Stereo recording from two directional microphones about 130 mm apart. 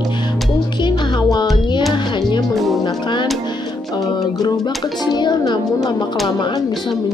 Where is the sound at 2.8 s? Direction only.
35° left (ahead or behind).